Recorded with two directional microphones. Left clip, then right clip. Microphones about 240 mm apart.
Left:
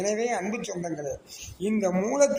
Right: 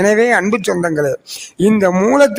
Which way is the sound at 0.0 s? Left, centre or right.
Right.